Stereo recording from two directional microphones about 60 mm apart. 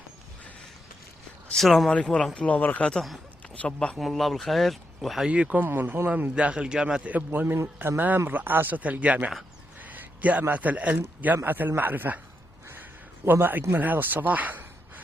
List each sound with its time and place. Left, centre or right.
1.5 s speech: centre
2.3 s speech: left
3.9 s speech: centre
5.3 s speech: right
6.3 s a man's voice: centre
7.3 s speech: right
9.8 s a sound: right
10.5 s speech: right
13.3 s speech: right